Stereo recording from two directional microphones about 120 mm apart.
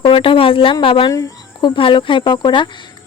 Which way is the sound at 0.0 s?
45° left (ahead or behind).